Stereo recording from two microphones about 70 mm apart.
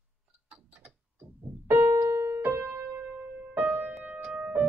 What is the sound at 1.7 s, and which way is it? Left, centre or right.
Keyboard, right.